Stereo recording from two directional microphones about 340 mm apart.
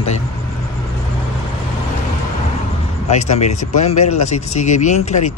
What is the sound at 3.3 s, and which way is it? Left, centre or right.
Speech, centre.